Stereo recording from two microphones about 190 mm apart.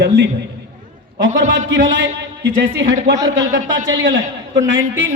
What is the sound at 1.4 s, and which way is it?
A man's voice, 75° right (ahead or behind).